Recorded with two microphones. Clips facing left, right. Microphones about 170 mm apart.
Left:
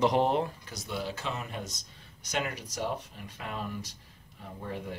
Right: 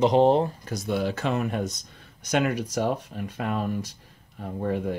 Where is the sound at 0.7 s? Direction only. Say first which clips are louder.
Right 9 dB; 50° right (ahead or behind).